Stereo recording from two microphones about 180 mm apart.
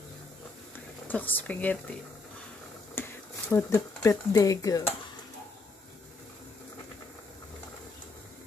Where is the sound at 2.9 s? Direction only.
15° left (ahead or behind).